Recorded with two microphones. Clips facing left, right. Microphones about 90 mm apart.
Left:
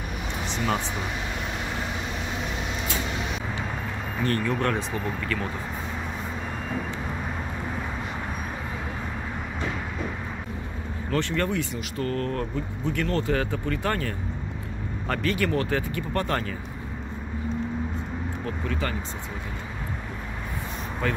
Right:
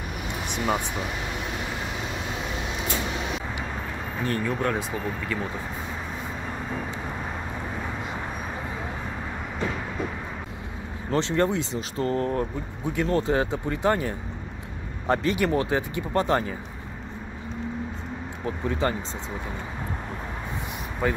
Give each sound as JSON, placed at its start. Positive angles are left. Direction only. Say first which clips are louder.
{"t": 4.2, "sound": "speech", "louder": "left 1 dB", "side_deg": -10}
{"t": 11.1, "sound": "speech", "louder": "right 3 dB", "side_deg": -25}
{"t": 18.4, "sound": "speech", "louder": "right 6 dB", "side_deg": -25}
{"t": 21.0, "sound": "speech", "louder": "right 2 dB", "side_deg": -15}